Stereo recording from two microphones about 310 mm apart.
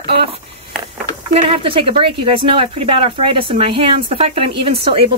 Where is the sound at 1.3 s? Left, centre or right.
Centre.